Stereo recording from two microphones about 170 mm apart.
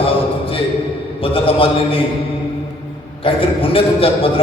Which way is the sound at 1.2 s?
30° left (ahead or behind).